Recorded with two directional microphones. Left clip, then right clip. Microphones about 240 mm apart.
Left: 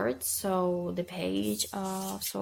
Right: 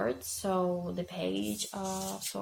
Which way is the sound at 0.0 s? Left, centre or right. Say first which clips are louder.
Left 2 dB; left.